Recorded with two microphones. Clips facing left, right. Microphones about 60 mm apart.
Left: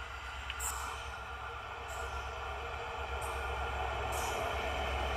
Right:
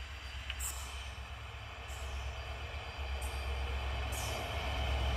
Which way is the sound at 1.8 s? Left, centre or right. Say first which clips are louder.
Left 8 dB; left.